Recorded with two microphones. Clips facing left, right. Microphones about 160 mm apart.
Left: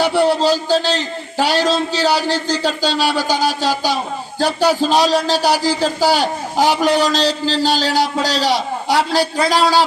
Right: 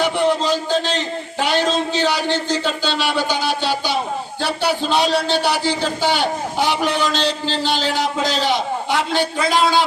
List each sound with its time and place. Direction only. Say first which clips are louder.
0.0 s a man's voice: left 3 dB; 35° left (ahead or behind)